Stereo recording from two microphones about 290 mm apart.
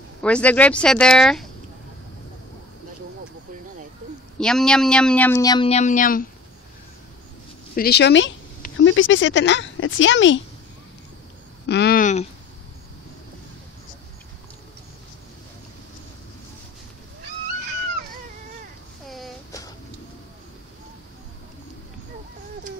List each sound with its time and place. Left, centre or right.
0.2 s speech: centre
4.4 s speech: centre; by 6.2 s left
7.7 s speech: left
11.6 s speech: left
19.0 s a sound: centre